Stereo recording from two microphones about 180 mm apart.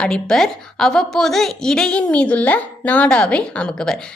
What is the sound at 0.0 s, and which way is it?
A woman's voice, 5° left (ahead or behind).